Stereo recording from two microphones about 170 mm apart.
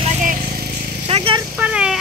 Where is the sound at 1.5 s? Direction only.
5° right (ahead or behind).